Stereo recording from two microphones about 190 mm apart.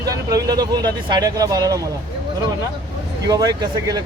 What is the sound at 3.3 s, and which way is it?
Speech, 20° right (ahead or behind).